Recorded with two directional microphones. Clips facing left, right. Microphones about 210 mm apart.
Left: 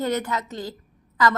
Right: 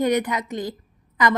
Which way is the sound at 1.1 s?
20° right (ahead or behind).